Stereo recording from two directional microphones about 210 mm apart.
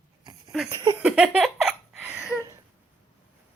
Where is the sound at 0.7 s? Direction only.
15° right (ahead or behind).